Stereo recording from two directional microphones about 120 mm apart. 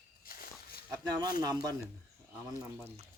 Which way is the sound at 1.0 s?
35° right (ahead or behind).